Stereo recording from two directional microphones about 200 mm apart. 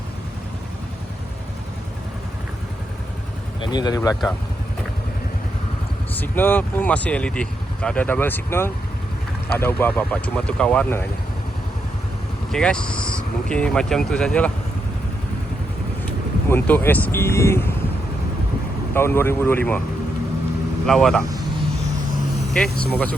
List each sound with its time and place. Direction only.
3.6 s speech: 20° left (ahead or behind)
6.1 s speech: 10° left (ahead or behind)
12.5 s speech: 5° left (ahead or behind)
16.5 s speech: 10° left (ahead or behind)
18.9 s speech: 10° left (ahead or behind)
20.8 s speech: centre (ahead or behind)
22.8 s speech: 5° left (ahead or behind)